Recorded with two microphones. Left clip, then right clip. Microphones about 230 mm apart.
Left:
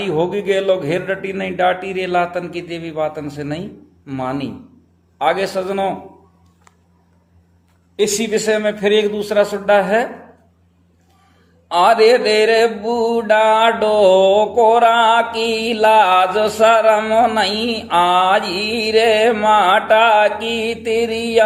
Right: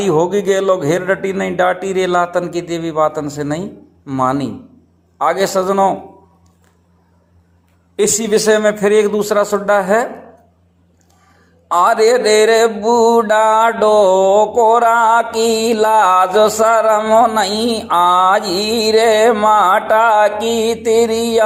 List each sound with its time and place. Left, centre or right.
0.0 s speech: right
4.0 s mantra: centre
7.9 s speech: right
11.7 s mantra: centre
18.3 s speech: centre
18.6 s mantra: centre